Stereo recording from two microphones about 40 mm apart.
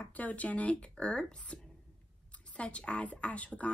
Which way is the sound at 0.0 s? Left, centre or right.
Left.